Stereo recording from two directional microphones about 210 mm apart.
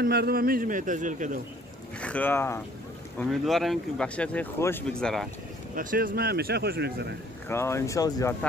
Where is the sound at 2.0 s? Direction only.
5° left (ahead or behind).